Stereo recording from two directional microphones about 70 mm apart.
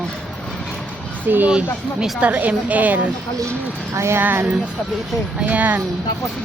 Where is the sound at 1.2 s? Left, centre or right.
Right.